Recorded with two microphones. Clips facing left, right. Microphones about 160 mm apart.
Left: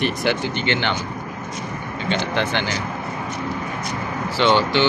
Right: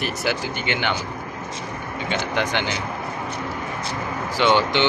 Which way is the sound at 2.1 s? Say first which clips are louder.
Left 2 dB; 10° right (ahead or behind).